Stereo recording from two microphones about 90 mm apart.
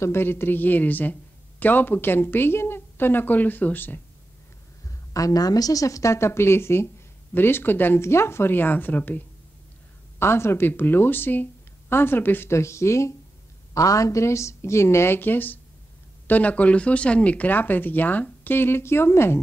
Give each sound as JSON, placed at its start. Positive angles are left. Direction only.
{"t": 0.0, "sound": "speech", "side_deg": 25}
{"t": 4.8, "sound": "a woman's voice", "side_deg": 40}